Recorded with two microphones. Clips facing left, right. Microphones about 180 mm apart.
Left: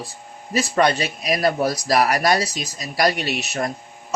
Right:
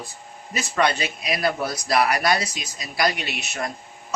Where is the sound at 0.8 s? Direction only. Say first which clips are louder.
Left 2 dB; 40° left (ahead or behind).